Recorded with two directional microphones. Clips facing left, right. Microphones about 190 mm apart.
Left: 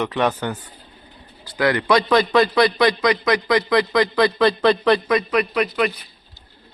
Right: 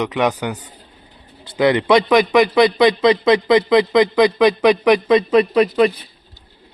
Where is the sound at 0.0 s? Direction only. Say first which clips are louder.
Right 2 dB; 15° right (ahead or behind).